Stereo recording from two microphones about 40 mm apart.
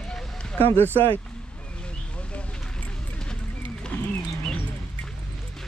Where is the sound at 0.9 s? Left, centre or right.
Left.